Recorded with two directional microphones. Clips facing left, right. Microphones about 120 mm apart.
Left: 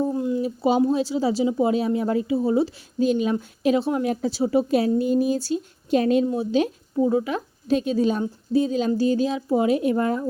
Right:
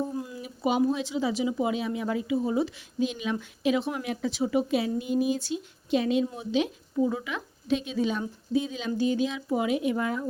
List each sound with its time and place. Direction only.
0.1 s a woman's voice: 25° left (ahead or behind)